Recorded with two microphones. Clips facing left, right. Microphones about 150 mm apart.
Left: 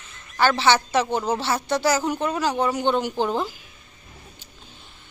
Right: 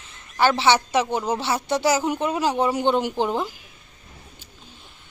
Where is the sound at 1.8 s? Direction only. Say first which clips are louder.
Right 1 dB; 25° right (ahead or behind).